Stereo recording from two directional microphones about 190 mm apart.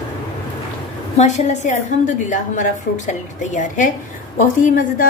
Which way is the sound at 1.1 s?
35° left (ahead or behind).